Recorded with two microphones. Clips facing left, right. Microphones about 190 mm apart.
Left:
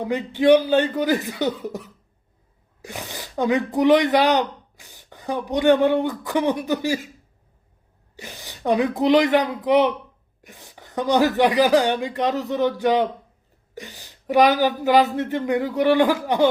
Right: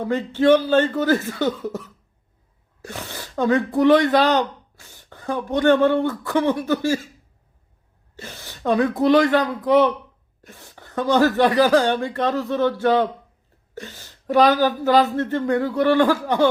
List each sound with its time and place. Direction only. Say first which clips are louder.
0.0 s speech: right 1 dB; 15° left (ahead or behind)
8.1 s speech: right 1 dB; 15° left (ahead or behind)